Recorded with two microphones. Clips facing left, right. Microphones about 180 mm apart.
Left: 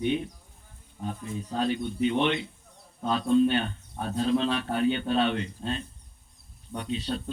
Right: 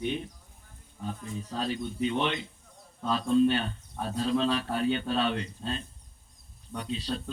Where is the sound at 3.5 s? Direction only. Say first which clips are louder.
Left 1 dB; 35° right (ahead or behind).